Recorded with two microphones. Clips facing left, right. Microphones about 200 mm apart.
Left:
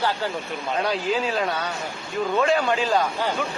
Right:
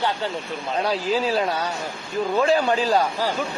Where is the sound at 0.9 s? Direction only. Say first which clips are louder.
Right 2 dB; 35° right (ahead or behind).